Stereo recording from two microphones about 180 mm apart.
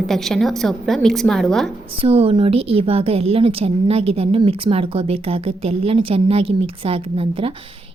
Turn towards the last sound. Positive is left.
turn(degrees=-30)  # may be behind; listen again after turning